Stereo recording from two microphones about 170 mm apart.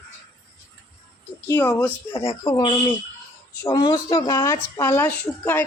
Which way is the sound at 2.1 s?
30° left (ahead or behind).